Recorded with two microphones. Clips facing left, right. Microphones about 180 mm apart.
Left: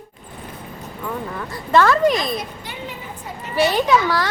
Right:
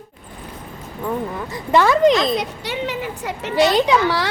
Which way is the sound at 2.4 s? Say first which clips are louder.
Right 6 dB; 80° right.